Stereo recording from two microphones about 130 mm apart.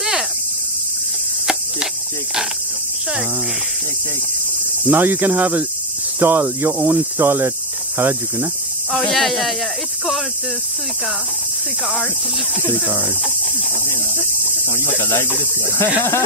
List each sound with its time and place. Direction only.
4.8 s cricket: 15° right (ahead or behind)
8.9 s speech: centre (ahead or behind)
14.8 s speech: 20° left (ahead or behind)